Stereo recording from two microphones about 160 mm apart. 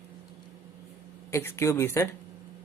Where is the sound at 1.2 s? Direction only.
15° left (ahead or behind).